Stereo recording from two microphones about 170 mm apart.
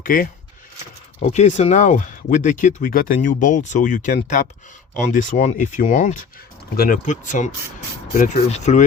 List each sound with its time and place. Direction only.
0.0 s speech: 55° left (ahead or behind)
1.2 s speech: 40° left (ahead or behind)